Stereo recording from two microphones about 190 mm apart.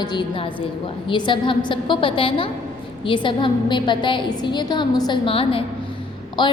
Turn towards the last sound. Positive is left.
turn(degrees=25)  # may be behind; listen again after turning